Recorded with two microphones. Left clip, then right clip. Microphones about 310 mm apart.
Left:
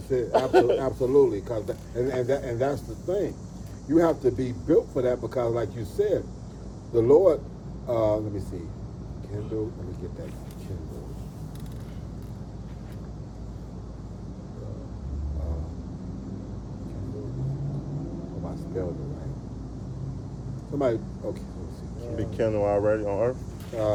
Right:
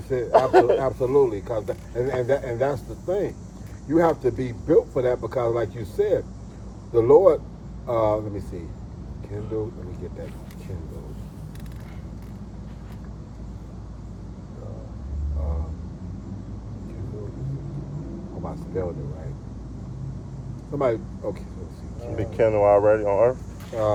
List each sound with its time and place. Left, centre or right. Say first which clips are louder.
0.1 s speech: right 4 dB; centre
20.7 s speech: right 2 dB; centre
22.1 s speech: right 6 dB; centre